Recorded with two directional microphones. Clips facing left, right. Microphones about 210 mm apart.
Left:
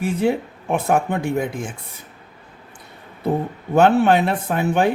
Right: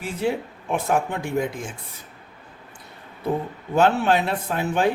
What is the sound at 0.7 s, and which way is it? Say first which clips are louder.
Speech: left 4 dB; 55° left (ahead or behind).